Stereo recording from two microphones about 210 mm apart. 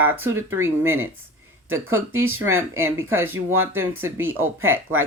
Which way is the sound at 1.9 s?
75° right (ahead or behind).